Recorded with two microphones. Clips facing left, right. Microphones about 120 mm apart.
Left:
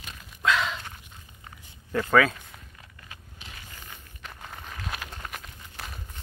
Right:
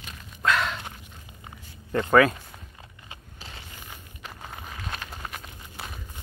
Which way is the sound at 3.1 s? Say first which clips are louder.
Right 3 dB; 30° right (ahead or behind).